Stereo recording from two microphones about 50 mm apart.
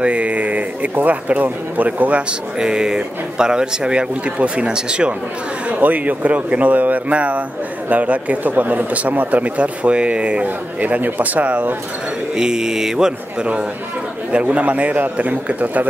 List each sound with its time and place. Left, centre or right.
0.0 s a man's voice: right
2.6 s speech: centre
5.7 s speech: right
12.4 s speech: centre
14.4 s speech: right